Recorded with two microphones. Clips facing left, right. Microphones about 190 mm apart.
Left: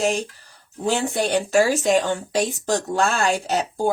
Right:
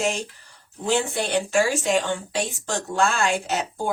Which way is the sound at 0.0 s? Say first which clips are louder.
Left 3 dB; 35° left (ahead or behind).